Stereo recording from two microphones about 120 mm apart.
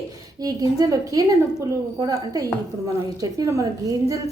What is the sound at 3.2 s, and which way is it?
A woman's voice, 30° right (ahead or behind).